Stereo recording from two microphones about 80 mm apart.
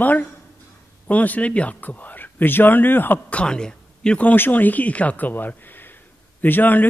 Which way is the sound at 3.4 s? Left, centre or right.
Centre.